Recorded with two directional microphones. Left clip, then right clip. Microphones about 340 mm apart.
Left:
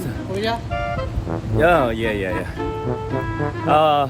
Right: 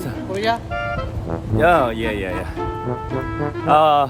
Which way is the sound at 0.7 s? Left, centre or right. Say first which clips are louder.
Even; centre.